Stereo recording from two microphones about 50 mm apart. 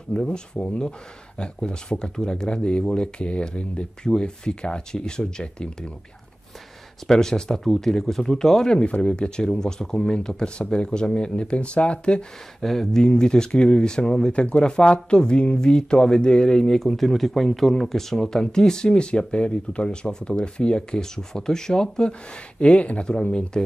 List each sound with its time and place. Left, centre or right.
0.1 s speech: centre
7.1 s speech: centre
12.6 s speech: centre
13.0 s speech: centre